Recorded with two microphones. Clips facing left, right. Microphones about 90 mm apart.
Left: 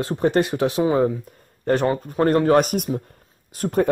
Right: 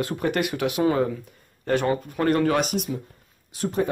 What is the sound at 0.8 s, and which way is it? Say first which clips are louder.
Speech: left 2 dB; 20° left (ahead or behind).